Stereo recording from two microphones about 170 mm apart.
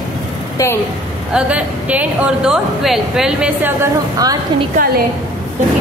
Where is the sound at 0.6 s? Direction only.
20° left (ahead or behind).